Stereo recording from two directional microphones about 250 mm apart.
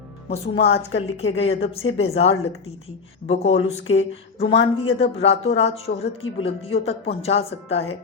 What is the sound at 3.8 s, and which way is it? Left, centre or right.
Speech, left.